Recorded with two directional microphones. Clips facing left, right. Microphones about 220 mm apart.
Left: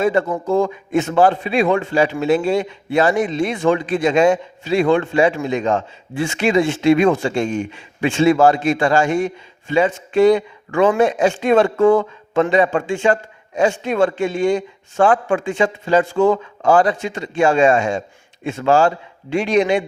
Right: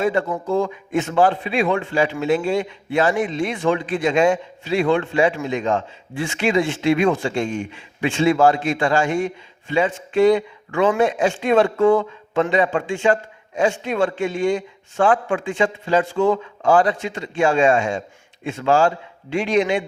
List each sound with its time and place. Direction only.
0.0 s a man's voice: 45° left (ahead or behind)